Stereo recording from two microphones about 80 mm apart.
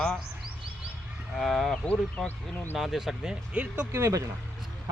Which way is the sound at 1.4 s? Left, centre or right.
Centre.